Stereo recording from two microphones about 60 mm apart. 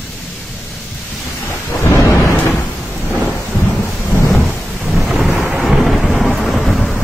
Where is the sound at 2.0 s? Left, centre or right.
Left.